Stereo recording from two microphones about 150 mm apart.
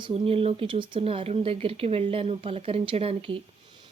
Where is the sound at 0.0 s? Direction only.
40° right (ahead or behind).